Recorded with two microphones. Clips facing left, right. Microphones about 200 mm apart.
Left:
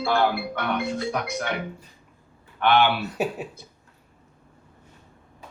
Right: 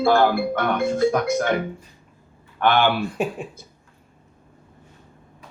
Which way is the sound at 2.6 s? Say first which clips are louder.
Right 1 dB; 45° right (ahead or behind).